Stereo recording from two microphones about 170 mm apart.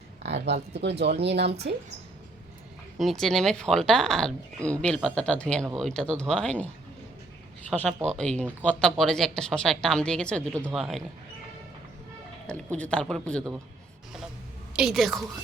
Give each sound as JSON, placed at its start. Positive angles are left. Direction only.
{"t": 0.2, "sound": "speech", "side_deg": -90}
{"t": 3.0, "sound": "speech", "side_deg": 0}
{"t": 7.7, "sound": "speech", "side_deg": 5}
{"t": 12.5, "sound": "speech", "side_deg": 5}
{"t": 14.8, "sound": "speech", "side_deg": 0}